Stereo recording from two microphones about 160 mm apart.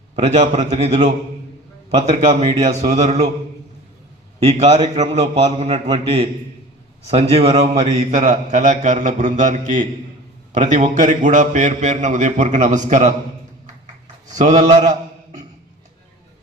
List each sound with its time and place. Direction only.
0.2 s a man's voice: 45° right (ahead or behind)
4.4 s a man's voice: 45° right (ahead or behind)
14.3 s a man's voice: 45° right (ahead or behind)